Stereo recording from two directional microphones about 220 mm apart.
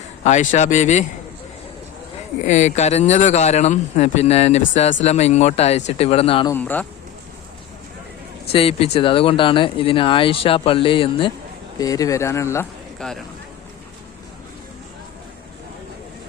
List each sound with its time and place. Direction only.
0.3 s speech: 30° left (ahead or behind)
2.5 s speech: 30° left (ahead or behind)
6.5 s speech: 10° left (ahead or behind)
8.5 s speech: 25° left (ahead or behind)
13.0 s speech: centre (ahead or behind)